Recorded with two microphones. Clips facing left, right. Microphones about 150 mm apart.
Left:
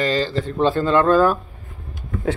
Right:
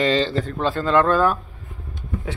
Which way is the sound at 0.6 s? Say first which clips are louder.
Left 2 dB; 30° left (ahead or behind).